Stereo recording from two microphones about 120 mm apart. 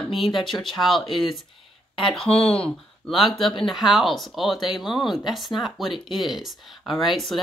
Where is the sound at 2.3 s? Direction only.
55° left (ahead or behind).